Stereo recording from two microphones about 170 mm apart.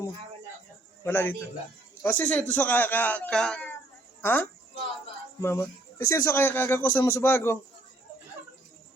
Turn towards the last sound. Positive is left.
turn(degrees=15)  # may be behind; listen again after turning